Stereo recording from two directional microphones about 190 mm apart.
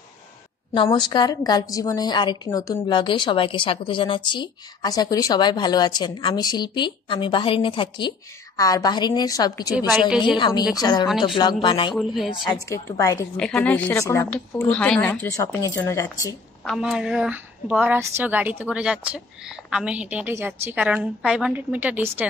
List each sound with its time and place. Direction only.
0.8 s a woman's voice: 20° left (ahead or behind)
9.8 s a woman's voice: 5° right (ahead or behind)
10.3 s a woman's voice: 25° left (ahead or behind)
11.1 s a woman's voice: centre (ahead or behind)
11.3 s a woman's voice: 25° left (ahead or behind)
11.9 s a woman's voice: centre (ahead or behind)
12.4 s speech: 15° left (ahead or behind)
13.4 s speech: 5° left (ahead or behind)
16.6 s a woman's voice: centre (ahead or behind)